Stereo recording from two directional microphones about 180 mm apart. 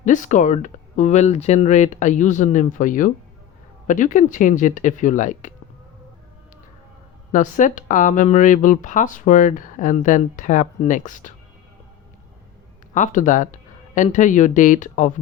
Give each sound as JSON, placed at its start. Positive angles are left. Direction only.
{"t": 0.0, "sound": "speech", "side_deg": 45}
{"t": 7.3, "sound": "speech", "side_deg": 45}
{"t": 12.9, "sound": "speech", "side_deg": 45}